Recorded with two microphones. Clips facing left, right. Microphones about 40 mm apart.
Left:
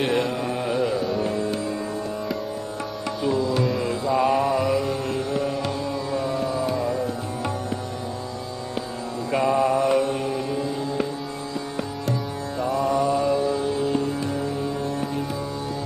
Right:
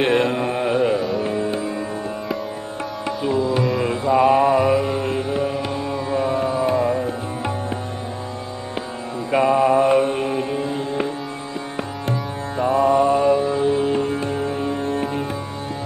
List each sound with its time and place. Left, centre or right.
0.0 s mantra: right
1.2 s music: right
3.8 s mantra: right
9.3 s music: right
12.5 s music: right